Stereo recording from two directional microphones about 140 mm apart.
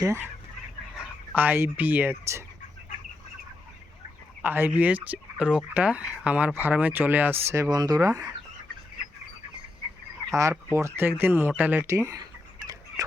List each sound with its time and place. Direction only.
0.0 s speech: 20° right (ahead or behind)
0.9 s speech: 10° right (ahead or behind)
4.4 s speech: 15° right (ahead or behind)
10.3 s speech: 20° right (ahead or behind)
13.0 s a sound: 25° right (ahead or behind)